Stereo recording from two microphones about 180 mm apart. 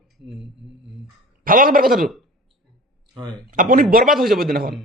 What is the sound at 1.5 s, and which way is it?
Speech, 50° right (ahead or behind).